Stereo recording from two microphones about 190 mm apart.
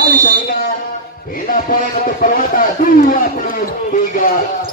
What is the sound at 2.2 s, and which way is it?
Music, 50° left (ahead or behind).